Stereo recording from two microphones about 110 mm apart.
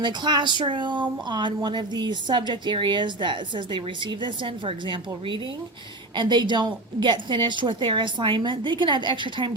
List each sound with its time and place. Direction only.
0.0 s speech: 40° right (ahead or behind)